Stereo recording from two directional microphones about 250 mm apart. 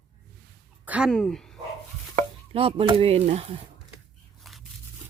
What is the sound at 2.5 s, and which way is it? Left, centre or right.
Speech, right.